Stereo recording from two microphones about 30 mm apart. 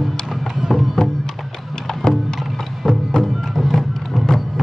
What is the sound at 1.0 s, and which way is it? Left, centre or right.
Music, centre.